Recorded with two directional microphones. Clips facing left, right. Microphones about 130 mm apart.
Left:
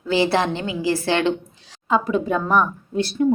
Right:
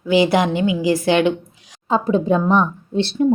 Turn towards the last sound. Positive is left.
turn(degrees=-25)  # may be behind; listen again after turning